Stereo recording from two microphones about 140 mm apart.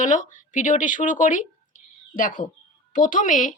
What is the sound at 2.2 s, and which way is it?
Speech, 75° left (ahead or behind).